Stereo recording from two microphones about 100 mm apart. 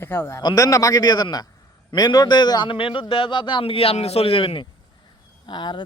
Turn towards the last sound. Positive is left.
turn(degrees=50)  # may be behind; listen again after turning